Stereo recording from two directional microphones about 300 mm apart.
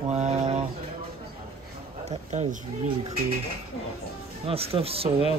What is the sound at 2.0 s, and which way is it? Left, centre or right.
Speech, right.